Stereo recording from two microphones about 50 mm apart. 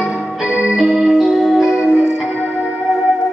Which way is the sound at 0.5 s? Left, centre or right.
Right.